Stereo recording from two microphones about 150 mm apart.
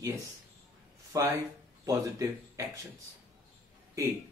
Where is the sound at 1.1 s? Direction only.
20° right (ahead or behind).